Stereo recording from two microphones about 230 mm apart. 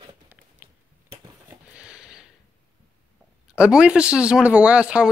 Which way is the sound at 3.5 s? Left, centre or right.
Centre.